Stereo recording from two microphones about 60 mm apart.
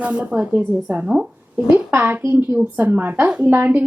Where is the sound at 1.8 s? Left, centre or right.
Right.